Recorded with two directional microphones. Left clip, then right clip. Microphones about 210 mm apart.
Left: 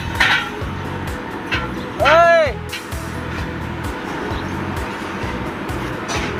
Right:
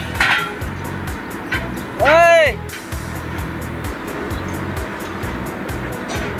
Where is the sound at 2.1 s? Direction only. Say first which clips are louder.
Right 1 dB; 20° right (ahead or behind).